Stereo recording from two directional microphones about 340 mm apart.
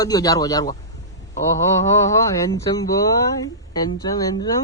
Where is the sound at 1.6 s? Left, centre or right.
Centre.